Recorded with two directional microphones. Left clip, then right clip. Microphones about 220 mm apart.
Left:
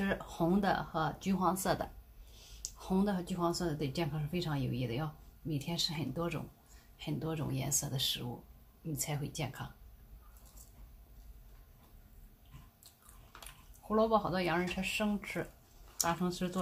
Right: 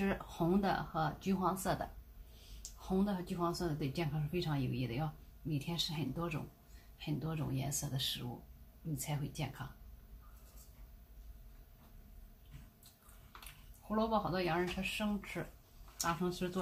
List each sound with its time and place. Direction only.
0.0 s speech: 30° left (ahead or behind)
2.9 s speech: 35° left (ahead or behind)
13.8 s speech: 30° left (ahead or behind)